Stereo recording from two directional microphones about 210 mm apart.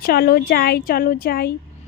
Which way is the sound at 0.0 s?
45° left (ahead or behind).